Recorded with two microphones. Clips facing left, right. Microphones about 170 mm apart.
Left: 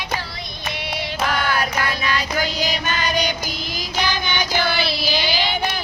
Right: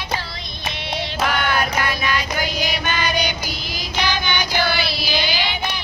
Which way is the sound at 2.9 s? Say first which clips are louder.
Right 1 dB; 40° left (ahead or behind).